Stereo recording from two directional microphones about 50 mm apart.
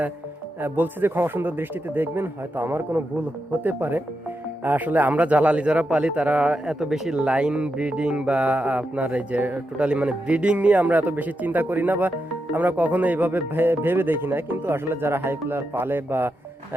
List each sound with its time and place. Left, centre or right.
0.6 s speech: right
3.5 s speech: right
6.7 s speech: centre; by 16.3 s right